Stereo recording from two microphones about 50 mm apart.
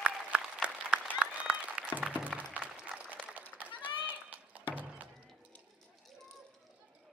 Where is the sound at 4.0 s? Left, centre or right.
Right.